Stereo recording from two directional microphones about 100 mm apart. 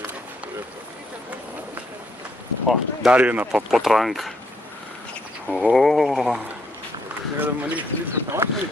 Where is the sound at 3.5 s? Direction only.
5° right (ahead or behind).